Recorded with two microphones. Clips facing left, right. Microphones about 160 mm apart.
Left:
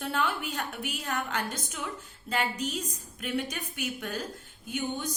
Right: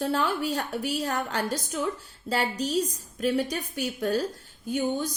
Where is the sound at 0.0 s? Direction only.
35° right (ahead or behind).